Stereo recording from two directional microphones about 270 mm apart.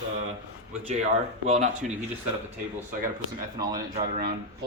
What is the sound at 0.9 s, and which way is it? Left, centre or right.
Speech, right.